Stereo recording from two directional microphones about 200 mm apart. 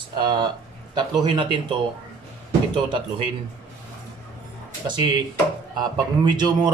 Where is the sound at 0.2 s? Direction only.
25° right (ahead or behind).